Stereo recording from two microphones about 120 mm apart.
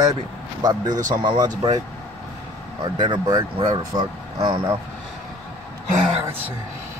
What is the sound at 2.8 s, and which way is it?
Speech, 40° right (ahead or behind).